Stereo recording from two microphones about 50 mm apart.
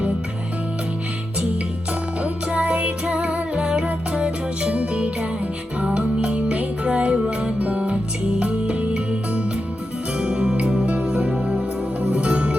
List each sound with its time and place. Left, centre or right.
2.2 s music: right